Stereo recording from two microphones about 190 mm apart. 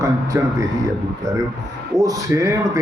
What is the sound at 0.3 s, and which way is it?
Speech, 15° right (ahead or behind).